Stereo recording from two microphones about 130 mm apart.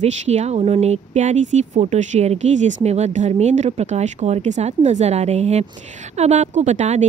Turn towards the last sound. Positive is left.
turn(degrees=-65)  # may be behind; listen again after turning